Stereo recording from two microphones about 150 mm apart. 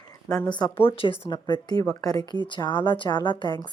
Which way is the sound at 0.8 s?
35° left (ahead or behind).